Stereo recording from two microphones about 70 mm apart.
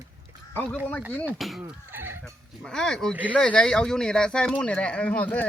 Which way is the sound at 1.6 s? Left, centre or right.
Right.